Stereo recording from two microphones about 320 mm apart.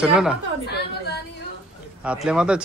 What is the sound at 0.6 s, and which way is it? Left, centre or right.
Speech, left.